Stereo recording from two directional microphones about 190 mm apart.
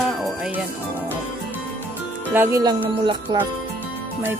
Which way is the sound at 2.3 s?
15° right (ahead or behind).